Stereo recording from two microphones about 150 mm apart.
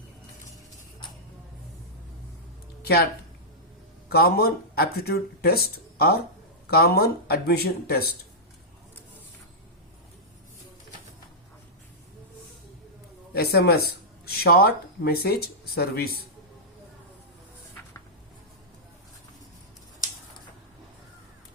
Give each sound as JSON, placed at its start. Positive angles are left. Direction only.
{"t": 4.1, "sound": "speech", "side_deg": 90}
{"t": 13.3, "sound": "speech", "side_deg": 90}